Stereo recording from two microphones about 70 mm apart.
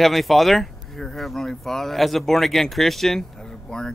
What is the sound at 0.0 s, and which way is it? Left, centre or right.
Speech, centre.